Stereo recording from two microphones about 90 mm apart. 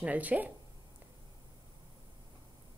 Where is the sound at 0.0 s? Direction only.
15° right (ahead or behind).